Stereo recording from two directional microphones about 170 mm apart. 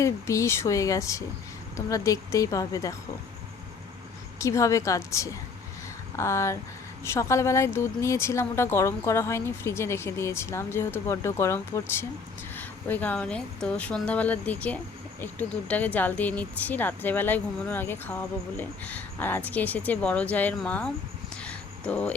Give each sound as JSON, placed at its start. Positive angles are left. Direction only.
{"t": 0.0, "sound": "speech", "side_deg": 20}
{"t": 4.4, "sound": "speech", "side_deg": 20}
{"t": 21.4, "sound": "a sound", "side_deg": 5}